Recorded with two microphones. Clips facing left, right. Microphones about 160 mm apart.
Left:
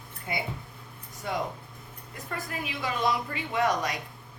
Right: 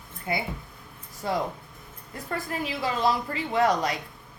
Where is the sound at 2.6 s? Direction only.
30° right (ahead or behind).